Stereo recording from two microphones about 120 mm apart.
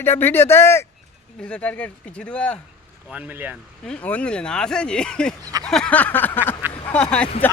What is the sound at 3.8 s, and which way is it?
Speech, 10° left (ahead or behind).